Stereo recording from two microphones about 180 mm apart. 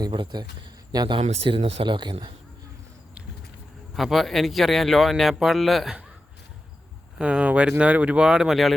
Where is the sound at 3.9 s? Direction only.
Centre (ahead or behind).